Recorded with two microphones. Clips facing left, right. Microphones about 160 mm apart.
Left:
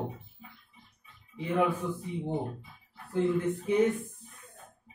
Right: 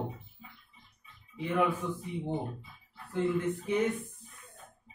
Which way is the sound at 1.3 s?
25° left (ahead or behind).